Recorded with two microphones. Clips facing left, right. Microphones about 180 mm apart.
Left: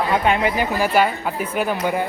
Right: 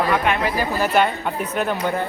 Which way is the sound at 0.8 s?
10° left (ahead or behind).